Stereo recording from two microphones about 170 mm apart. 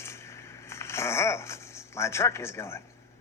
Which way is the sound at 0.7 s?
15° left (ahead or behind).